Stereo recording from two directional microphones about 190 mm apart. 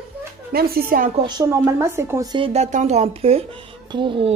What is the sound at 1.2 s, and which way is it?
Speech, 15° right (ahead or behind).